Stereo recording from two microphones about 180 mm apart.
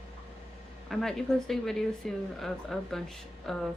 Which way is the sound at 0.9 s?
Centre (ahead or behind).